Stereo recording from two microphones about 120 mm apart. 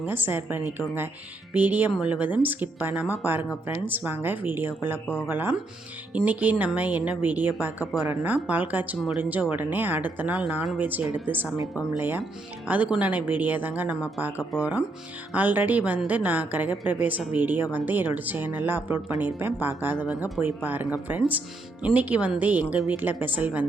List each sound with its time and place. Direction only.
0.0 s a woman's voice: 15° right (ahead or behind)